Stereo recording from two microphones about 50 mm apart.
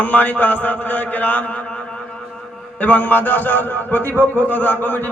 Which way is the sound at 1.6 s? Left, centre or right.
Centre.